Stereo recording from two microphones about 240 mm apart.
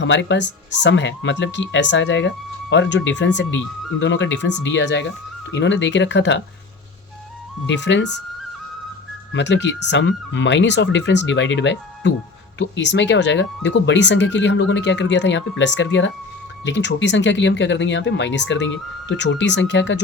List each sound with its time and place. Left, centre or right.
0.0 s speech: left
7.7 s speech: left
9.3 s speech: left